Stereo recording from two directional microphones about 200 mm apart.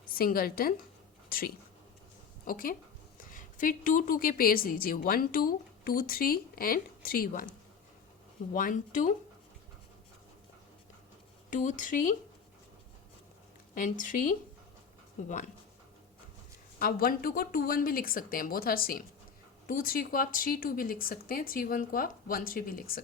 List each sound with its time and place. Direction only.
0.0 s a woman's voice: 45° left (ahead or behind)
8.5 s speech: 40° left (ahead or behind)
11.5 s speech: 40° left (ahead or behind)
13.7 s speech: 40° left (ahead or behind)
16.8 s a woman's voice: 50° left (ahead or behind)